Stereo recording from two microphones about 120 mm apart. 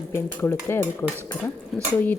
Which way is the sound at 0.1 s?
20° left (ahead or behind).